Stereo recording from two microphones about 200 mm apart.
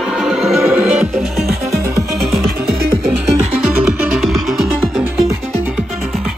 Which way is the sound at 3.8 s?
5° right (ahead or behind).